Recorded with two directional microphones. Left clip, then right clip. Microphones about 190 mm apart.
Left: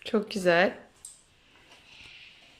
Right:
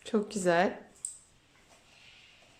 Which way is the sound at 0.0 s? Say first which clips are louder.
Left 4 dB; 5° left (ahead or behind).